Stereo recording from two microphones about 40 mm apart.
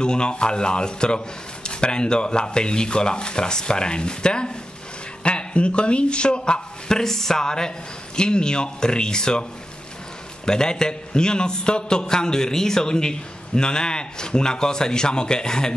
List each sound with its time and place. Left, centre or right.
0.0 s a man's voice: left